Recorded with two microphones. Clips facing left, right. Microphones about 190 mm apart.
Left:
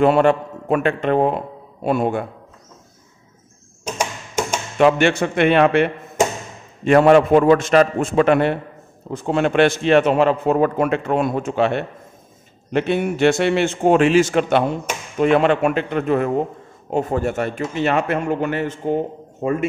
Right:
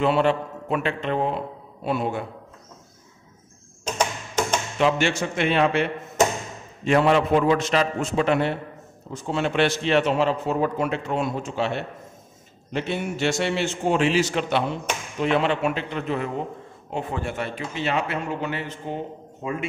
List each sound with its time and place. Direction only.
0.0 s a man's voice: 50° left (ahead or behind)
3.8 s a sound: 10° left (ahead or behind)
4.7 s a man's voice: 55° left (ahead or behind)